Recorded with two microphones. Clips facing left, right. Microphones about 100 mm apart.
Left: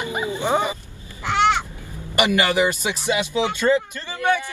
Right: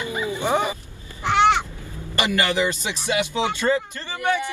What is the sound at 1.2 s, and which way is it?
Crow, 20° right (ahead or behind).